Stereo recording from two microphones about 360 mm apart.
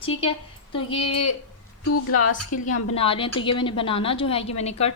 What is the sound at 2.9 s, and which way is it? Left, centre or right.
A woman's voice, centre.